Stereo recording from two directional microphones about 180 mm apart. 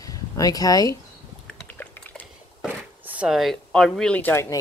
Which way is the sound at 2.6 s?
5° right (ahead or behind).